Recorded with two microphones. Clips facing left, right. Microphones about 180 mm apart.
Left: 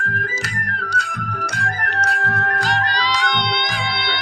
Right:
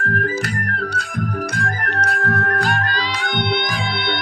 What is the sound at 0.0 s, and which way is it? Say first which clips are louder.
Music: right 5 dB; 50° right (ahead or behind).